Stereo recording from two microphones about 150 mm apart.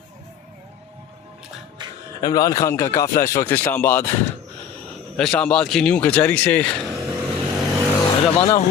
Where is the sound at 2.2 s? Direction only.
25° left (ahead or behind).